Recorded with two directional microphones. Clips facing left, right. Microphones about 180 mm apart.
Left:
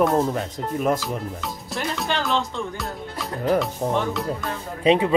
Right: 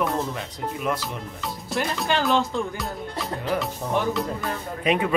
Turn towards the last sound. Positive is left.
turn(degrees=25)  # may be behind; listen again after turning